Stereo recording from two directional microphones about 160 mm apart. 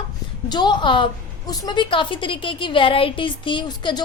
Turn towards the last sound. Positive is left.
turn(degrees=25)  # may be behind; listen again after turning